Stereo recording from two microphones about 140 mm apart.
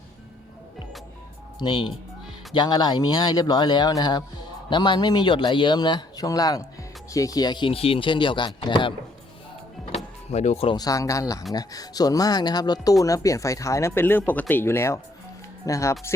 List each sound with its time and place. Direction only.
1.6 s speech: 30° left (ahead or behind)
9.9 s power windows: 50° left (ahead or behind)
10.8 s speech: 25° left (ahead or behind)